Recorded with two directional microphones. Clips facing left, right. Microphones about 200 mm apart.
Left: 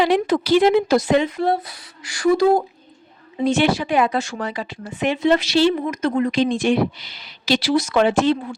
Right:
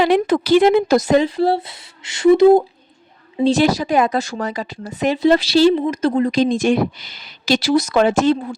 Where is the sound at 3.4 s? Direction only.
35° right (ahead or behind).